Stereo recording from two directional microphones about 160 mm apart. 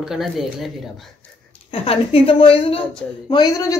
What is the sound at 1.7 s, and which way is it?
A woman's voice, 35° left (ahead or behind).